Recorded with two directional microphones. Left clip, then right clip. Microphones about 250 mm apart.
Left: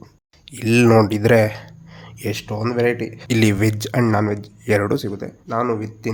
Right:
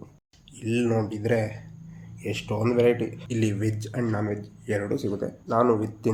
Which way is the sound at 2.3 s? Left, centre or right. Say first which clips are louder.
Left 1 dB; left.